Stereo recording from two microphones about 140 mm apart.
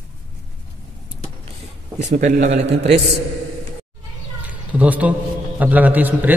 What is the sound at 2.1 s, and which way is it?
Speech, 70° right (ahead or behind).